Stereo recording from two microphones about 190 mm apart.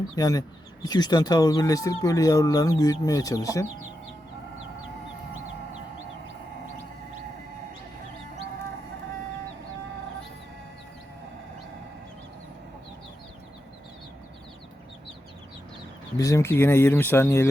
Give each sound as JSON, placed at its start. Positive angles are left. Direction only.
{"t": 0.2, "sound": "speech", "side_deg": 20}
{"t": 16.1, "sound": "speech", "side_deg": 15}